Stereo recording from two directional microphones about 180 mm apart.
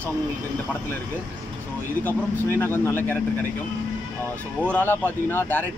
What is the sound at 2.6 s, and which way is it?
Speech, 10° left (ahead or behind).